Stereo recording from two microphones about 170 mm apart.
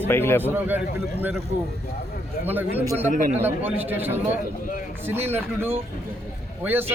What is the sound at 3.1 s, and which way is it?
Speech, 50° right (ahead or behind).